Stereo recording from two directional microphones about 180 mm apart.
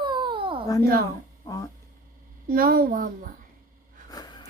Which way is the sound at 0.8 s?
55° right (ahead or behind).